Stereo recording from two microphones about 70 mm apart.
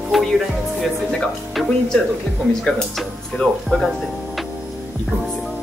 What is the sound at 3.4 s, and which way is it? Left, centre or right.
Speech, centre.